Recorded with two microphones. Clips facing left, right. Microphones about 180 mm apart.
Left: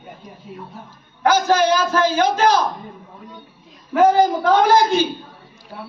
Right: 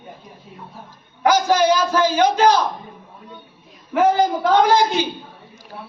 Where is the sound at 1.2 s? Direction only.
15° right (ahead or behind).